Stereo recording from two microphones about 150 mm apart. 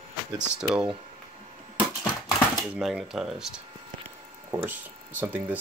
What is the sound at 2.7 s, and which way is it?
Speech, 5° right (ahead or behind).